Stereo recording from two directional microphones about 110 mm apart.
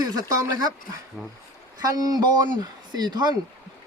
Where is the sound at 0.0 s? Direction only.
35° right (ahead or behind).